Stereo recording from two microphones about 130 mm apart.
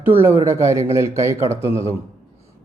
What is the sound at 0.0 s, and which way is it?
A man's voice, 15° right (ahead or behind).